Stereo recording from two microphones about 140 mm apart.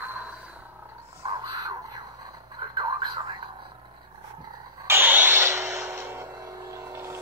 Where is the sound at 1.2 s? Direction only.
30° right (ahead or behind).